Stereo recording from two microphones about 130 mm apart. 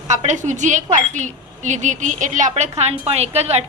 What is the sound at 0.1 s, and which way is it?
Speech, 65° right (ahead or behind).